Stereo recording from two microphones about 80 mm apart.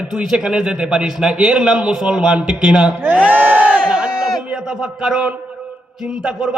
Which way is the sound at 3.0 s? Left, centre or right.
Centre.